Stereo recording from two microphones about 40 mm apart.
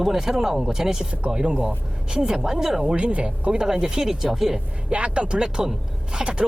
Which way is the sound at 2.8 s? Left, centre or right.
Right.